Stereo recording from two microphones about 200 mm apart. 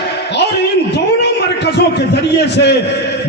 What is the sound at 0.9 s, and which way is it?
A man's voice, 55° left (ahead or behind).